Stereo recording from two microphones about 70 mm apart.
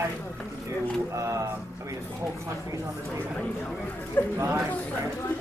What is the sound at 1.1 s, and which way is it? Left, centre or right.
Speech, right.